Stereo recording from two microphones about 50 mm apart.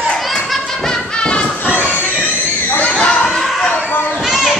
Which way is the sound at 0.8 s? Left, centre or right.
Centre.